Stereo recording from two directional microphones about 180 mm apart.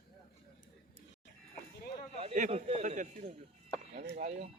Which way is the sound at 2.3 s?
40° right (ahead or behind).